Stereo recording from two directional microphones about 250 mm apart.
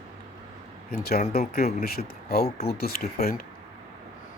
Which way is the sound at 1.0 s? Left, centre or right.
Left.